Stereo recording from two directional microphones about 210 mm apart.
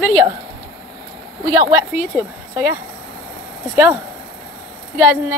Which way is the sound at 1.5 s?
15° right (ahead or behind).